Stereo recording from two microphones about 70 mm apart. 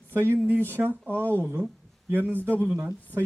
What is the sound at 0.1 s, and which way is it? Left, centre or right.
Speech, right.